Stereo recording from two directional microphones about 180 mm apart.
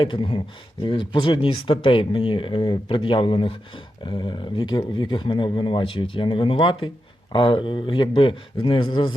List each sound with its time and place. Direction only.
0.0 s speech: 25° left (ahead or behind)